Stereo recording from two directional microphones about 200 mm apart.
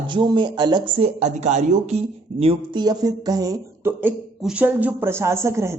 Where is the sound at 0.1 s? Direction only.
25° right (ahead or behind).